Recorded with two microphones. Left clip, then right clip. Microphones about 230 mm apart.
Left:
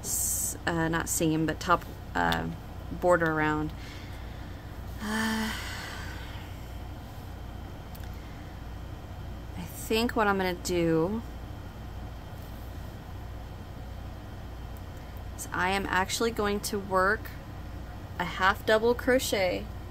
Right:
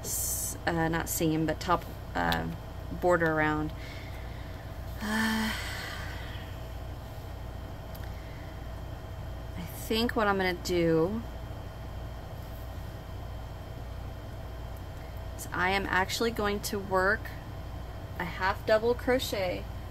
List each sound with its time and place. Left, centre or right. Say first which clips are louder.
0.0 s a woman's voice: left 3 dB; centre
5.0 s a sound: right 1 dB; centre
9.6 s speech: left 2 dB; centre
15.5 s speech: even; centre
18.1 s speech: left 5 dB; centre